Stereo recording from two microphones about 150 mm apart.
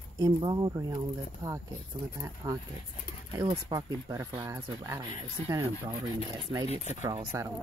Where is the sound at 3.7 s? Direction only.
25° right (ahead or behind).